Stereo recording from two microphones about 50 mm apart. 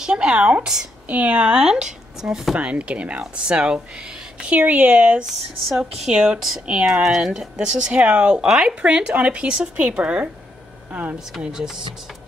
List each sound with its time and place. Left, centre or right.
0.0 s speech: centre
2.5 s speech: right
4.6 s speech: right
5.9 s speech: centre
6.6 s speech: right
7.0 s speech: centre
7.9 s speech: right
10.9 s speech: right
11.4 s speech: centre